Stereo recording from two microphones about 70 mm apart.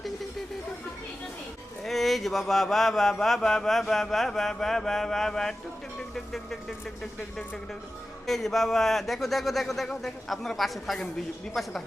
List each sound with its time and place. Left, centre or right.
1.8 s mantra: centre
6.0 s speech: centre
8.3 s mantra: centre